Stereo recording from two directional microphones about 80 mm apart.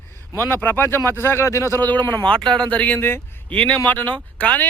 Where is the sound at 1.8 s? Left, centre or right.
Left.